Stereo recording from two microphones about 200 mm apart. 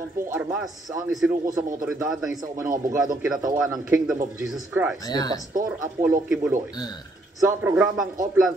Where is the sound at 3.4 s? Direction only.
20° right (ahead or behind).